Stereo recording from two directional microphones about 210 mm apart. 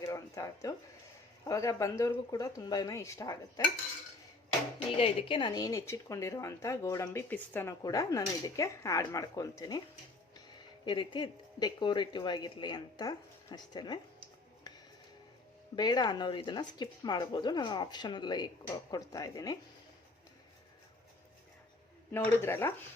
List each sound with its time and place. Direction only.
0.0 s a sound: 15° left (ahead or behind)
1.5 s speech: 15° left (ahead or behind)
4.9 s speech: 25° left (ahead or behind)
10.8 s speech: 20° left (ahead or behind)
14.7 s a sound: 20° left (ahead or behind)
15.7 s speech: 20° left (ahead or behind)
22.4 s speech: 10° left (ahead or behind)